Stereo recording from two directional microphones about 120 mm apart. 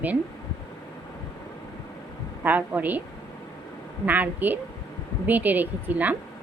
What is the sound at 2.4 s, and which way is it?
Speech, 15° right (ahead or behind).